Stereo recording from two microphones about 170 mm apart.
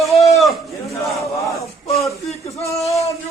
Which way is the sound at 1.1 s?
20° left (ahead or behind).